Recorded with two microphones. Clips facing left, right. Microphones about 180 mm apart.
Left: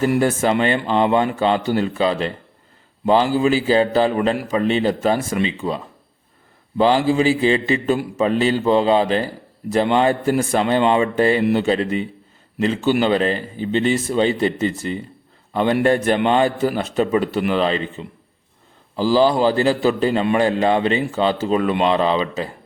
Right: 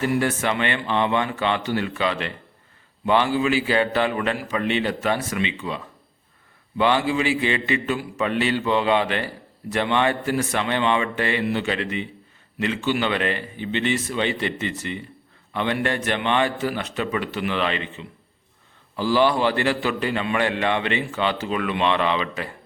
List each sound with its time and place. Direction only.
0.5 s a man's voice: 35° left (ahead or behind)